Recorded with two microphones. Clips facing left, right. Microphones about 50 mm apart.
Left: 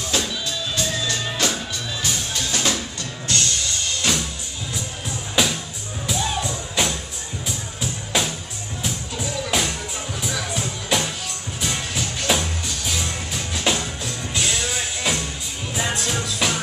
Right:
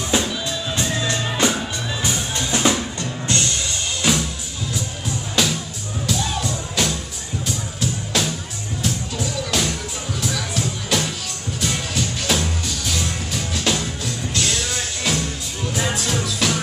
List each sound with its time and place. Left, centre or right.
0.1 s music: right
4.0 s music: centre
5.3 s music: centre